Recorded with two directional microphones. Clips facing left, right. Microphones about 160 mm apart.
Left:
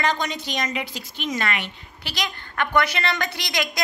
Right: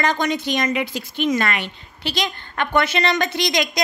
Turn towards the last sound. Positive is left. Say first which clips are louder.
# right 6 dB
turn(degrees=-20)  # may be behind; listen again after turning